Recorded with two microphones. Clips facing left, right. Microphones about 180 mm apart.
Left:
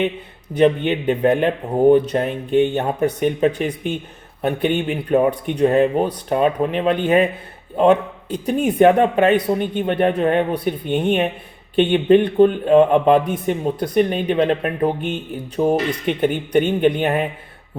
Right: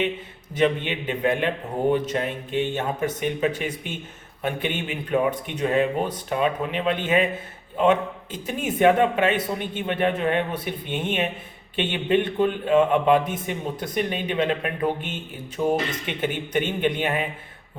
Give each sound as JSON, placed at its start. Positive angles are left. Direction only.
{"t": 0.5, "sound": "speech", "side_deg": 40}
{"t": 4.9, "sound": "speech", "side_deg": 40}